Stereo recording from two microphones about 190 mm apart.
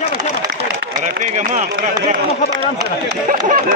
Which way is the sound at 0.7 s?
40° right (ahead or behind).